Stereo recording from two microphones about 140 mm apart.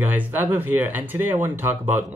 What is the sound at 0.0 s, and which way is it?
Speech, 15° right (ahead or behind).